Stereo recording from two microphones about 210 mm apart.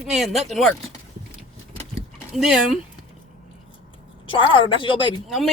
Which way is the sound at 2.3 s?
Centre (ahead or behind).